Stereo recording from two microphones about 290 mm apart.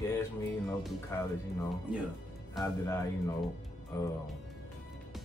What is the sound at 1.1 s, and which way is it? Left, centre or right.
Speech, centre.